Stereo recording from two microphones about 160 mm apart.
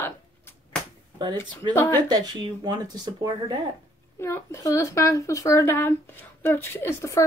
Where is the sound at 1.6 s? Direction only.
30° right (ahead or behind).